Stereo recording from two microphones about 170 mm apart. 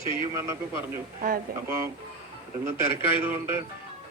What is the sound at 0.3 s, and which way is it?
A man's voice, 15° right (ahead or behind).